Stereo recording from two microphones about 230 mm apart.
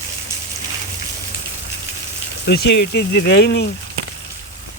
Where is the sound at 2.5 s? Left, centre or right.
Left.